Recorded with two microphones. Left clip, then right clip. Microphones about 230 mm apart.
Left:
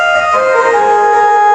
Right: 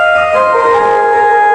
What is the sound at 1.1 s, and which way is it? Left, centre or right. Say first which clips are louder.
Music: even; centre.